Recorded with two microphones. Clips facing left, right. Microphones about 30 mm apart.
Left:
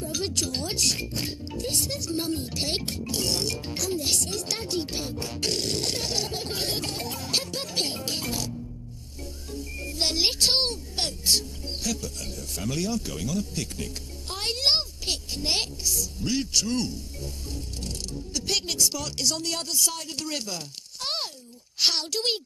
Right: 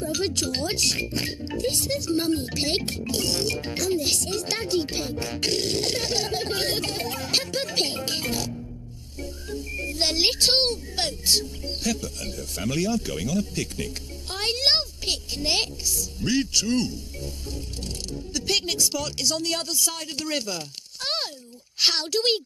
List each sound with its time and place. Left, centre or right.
0.0 s speech: right
13.3 s speech: right
13.7 s a sound: right
16.3 s speech: right